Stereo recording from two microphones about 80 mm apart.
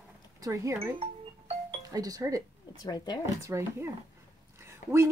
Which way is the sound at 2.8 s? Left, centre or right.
Left.